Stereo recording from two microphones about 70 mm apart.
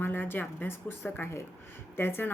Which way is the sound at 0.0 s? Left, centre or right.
Left.